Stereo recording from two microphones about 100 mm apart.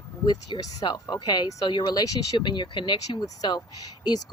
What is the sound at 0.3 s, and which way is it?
A woman's voice, 40° left (ahead or behind).